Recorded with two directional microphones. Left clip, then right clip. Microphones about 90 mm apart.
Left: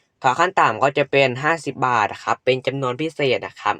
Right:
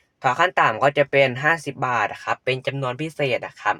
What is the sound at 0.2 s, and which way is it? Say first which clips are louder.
Speech: left 2 dB; 20° left (ahead or behind).